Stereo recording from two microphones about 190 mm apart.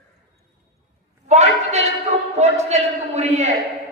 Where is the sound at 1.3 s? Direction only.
35° right (ahead or behind).